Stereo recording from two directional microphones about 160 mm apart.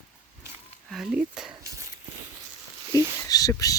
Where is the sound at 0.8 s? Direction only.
Centre (ahead or behind).